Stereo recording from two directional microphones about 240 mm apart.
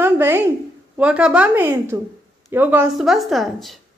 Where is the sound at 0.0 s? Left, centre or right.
Centre.